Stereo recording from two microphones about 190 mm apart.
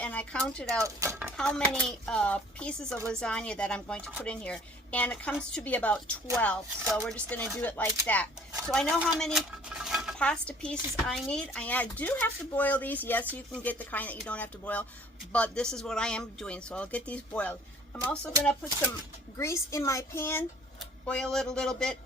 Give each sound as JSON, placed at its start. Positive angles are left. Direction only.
{"t": 0.0, "sound": "speech", "side_deg": 5}
{"t": 0.8, "sound": "speech", "side_deg": -15}
{"t": 1.4, "sound": "speech", "side_deg": 5}
{"t": 19.4, "sound": "speech", "side_deg": 15}